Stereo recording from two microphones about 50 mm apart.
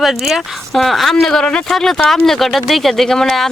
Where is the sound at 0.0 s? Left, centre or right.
Centre.